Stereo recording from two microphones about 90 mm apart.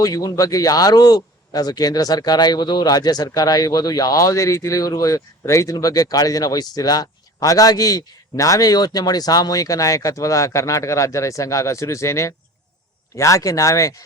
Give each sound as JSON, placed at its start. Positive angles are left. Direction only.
{"t": 0.0, "sound": "a man's voice", "side_deg": 40}